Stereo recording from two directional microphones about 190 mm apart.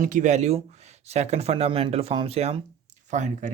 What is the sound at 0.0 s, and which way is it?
Speech, 40° right (ahead or behind).